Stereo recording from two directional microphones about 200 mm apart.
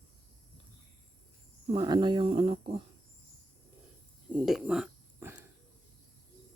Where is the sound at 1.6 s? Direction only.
25° right (ahead or behind).